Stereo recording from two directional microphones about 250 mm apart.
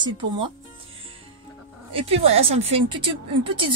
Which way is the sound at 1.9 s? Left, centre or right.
Right.